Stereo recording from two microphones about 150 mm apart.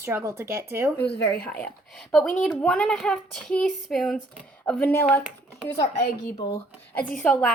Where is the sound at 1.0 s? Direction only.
90° left.